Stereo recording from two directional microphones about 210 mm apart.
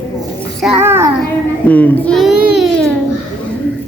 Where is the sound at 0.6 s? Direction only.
5° right (ahead or behind).